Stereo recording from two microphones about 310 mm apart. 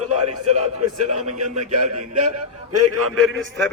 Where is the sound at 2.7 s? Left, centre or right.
Right.